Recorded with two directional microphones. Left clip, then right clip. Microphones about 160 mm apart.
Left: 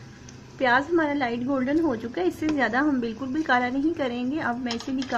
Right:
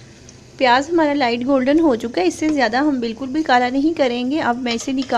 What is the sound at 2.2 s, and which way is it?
A woman's voice, 30° right (ahead or behind).